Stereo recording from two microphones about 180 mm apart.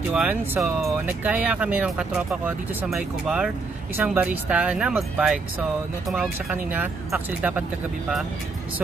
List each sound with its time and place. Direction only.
0.1 s speech: 5° right (ahead or behind)